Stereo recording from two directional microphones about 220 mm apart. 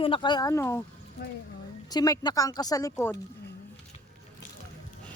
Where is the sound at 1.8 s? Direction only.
15° left (ahead or behind).